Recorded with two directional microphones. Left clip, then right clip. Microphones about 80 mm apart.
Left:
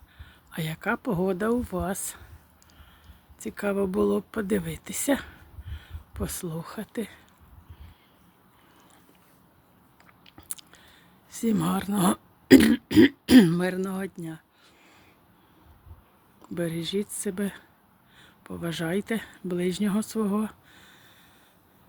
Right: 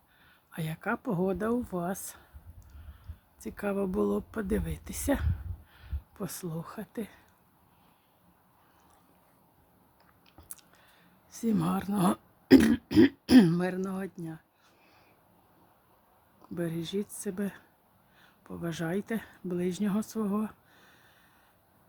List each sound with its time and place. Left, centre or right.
0.3 s speech: left
3.4 s speech: left
10.5 s whispering: left
11.3 s a sound: left
11.6 s speech: left
16.6 s speech: left